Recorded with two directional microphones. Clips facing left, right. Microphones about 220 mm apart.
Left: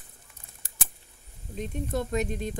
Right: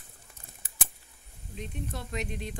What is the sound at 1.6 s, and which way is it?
Speech, 45° left (ahead or behind).